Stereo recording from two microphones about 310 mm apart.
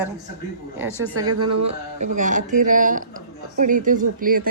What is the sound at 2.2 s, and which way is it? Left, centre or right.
Speech, right.